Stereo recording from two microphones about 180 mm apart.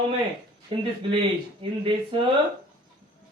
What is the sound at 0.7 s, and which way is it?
Speech, 30° right (ahead or behind).